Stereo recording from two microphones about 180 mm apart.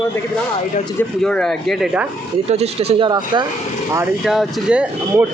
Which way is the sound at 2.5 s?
35° right (ahead or behind).